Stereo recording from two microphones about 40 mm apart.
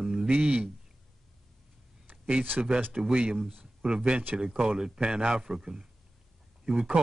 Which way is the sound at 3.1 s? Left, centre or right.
Right.